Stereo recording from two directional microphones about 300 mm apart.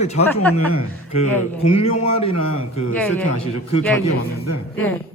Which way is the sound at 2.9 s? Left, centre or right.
Centre.